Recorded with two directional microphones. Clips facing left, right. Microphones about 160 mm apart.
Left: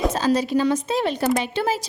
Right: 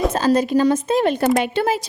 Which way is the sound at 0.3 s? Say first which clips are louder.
Right 4 dB; 45° right (ahead or behind).